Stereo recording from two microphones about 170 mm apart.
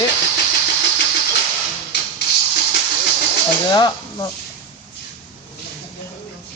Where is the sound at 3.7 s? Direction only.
25° left (ahead or behind).